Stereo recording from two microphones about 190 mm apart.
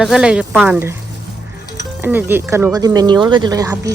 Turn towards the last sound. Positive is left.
turn(degrees=-15)  # may be behind; listen again after turning